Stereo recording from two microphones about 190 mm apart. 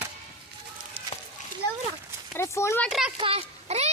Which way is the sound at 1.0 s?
30° right (ahead or behind).